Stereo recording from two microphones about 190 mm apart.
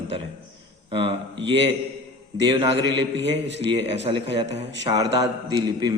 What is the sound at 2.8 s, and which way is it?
Speech, 70° right (ahead or behind).